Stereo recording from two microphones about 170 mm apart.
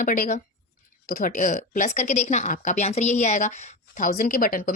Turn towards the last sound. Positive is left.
turn(degrees=55)  # may be behind; listen again after turning